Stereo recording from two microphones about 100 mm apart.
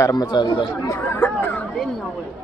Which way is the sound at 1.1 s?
20° left (ahead or behind).